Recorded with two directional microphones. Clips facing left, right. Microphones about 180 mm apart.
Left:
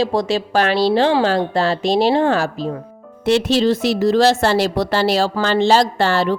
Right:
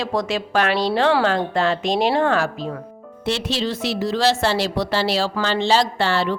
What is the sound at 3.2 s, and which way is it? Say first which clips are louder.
Speech: left 8 dB; 45° left (ahead or behind).